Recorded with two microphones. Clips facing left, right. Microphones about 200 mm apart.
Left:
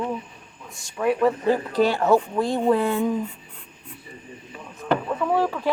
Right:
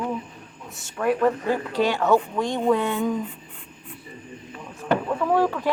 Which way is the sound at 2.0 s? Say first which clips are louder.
Left 1 dB; 10° left (ahead or behind).